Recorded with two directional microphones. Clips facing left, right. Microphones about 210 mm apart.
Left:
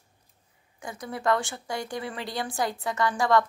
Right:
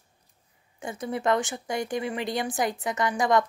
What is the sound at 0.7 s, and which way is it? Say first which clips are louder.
Speech: right 5 dB; 25° right (ahead or behind).